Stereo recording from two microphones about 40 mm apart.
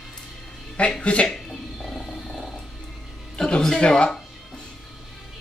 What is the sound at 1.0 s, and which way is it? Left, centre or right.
Speech, left.